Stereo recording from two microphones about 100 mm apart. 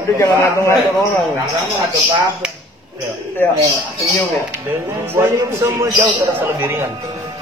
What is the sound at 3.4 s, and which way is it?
Speech, 20° left (ahead or behind).